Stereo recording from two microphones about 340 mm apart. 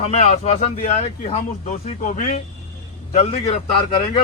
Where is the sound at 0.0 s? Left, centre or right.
Centre.